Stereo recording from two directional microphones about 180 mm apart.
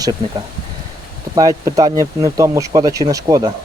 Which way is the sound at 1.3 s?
20° right (ahead or behind).